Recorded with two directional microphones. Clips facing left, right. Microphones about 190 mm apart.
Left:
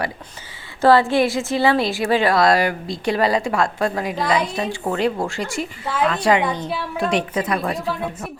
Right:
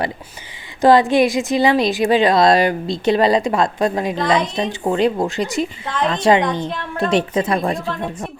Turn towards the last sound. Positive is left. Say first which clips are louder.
# right 4 dB
turn(degrees=-30)  # may be behind; listen again after turning